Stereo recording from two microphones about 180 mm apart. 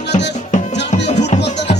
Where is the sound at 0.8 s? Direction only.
70° left (ahead or behind).